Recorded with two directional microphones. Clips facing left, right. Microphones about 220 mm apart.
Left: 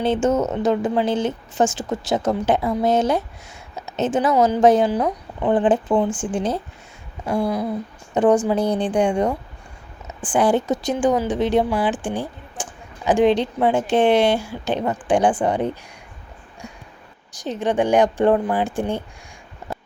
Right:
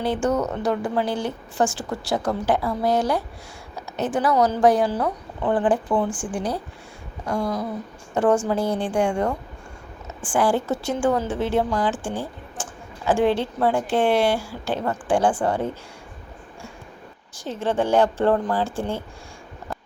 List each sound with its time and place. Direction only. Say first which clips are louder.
0.0 s a woman's voice: left 3 dB; 25° left (ahead or behind)
7.3 s a woman's voice: left 4 dB; 10° left (ahead or behind)
17.3 s speech: left 3 dB; 15° left (ahead or behind)